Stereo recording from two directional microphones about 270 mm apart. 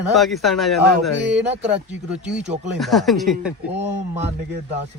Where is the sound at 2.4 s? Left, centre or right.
Right.